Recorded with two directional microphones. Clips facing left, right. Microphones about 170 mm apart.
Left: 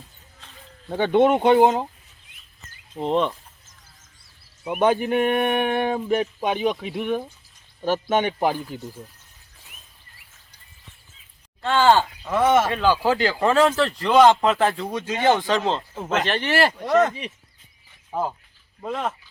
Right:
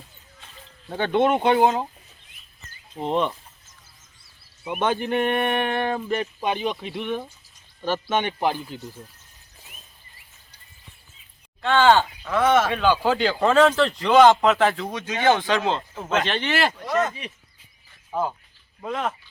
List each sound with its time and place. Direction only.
0.9 s speech: 10° left (ahead or behind)
1.2 s speech: centre (ahead or behind)
3.0 s speech: centre (ahead or behind)
4.7 s speech: 5° left (ahead or behind)
11.6 s speech: 5° left (ahead or behind)
16.8 s speech: 55° left (ahead or behind)
18.1 s speech: centre (ahead or behind)